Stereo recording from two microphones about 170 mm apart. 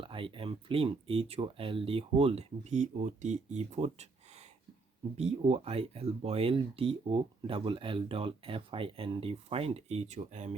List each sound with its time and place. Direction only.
0.0 s speech: 30° right (ahead or behind)